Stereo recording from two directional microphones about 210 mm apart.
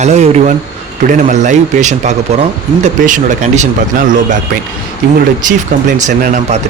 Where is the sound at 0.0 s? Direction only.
35° right (ahead or behind).